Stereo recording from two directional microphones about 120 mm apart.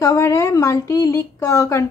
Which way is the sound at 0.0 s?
25° left (ahead or behind).